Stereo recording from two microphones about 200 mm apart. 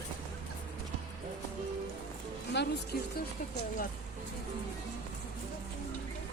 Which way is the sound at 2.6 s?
60° left (ahead or behind).